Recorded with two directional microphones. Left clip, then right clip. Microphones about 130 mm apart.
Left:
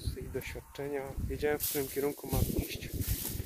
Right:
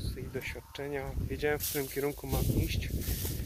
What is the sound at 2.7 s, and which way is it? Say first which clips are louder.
Boat: right 2 dB; centre (ahead or behind).